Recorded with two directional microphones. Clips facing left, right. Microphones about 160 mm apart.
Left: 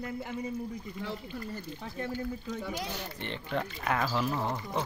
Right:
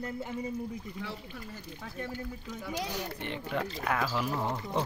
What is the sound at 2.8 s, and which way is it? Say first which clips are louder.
Speech: right 2 dB; 10° right (ahead or behind).